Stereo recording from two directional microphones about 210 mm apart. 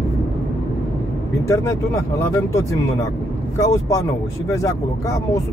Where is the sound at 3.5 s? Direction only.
15° left (ahead or behind).